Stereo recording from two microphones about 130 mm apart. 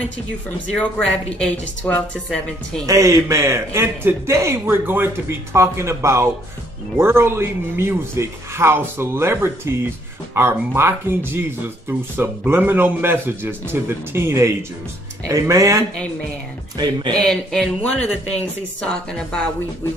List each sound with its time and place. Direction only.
0.7 s a woman's voice: 10° left (ahead or behind)
2.9 s a man's voice: 25° right (ahead or behind)
17.2 s speech: centre (ahead or behind)